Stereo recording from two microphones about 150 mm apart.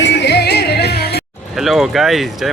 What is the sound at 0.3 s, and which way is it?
Music, 90° left.